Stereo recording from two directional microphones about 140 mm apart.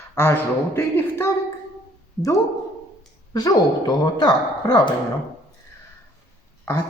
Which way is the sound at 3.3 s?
30° left (ahead or behind).